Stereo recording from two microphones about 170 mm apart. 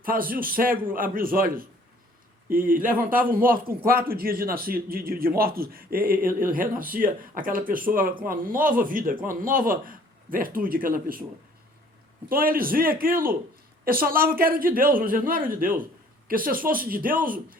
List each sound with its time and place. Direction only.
0.0 s a man's voice: 55° right (ahead or behind)
12.3 s a man's voice: 60° right (ahead or behind)